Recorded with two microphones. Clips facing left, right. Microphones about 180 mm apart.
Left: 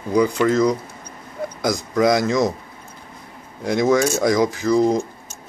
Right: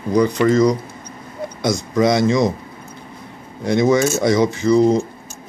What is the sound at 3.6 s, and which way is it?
A man's voice, centre (ahead or behind).